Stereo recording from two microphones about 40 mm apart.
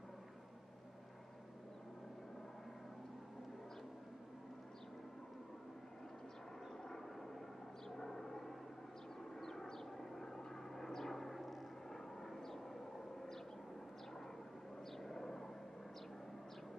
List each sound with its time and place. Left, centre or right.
6.8 s vehicle: centre
7.9 s a sound: centre
9.2 s vehicle: centre
15.0 s vehicle: centre